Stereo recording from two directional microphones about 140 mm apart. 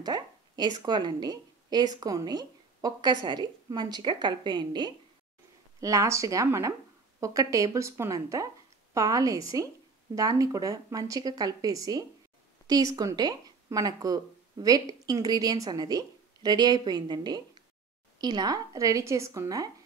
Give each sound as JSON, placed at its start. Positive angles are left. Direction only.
{"t": 0.0, "sound": "a woman's voice", "side_deg": -30}